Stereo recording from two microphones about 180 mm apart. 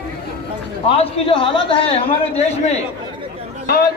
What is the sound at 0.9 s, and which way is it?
A man's voice, 30° left (ahead or behind).